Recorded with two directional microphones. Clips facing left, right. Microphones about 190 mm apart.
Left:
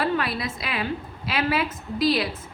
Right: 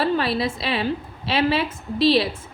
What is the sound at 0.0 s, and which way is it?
A woman's voice, 30° right (ahead or behind).